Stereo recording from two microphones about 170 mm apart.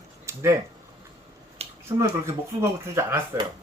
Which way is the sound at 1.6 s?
35° right (ahead or behind).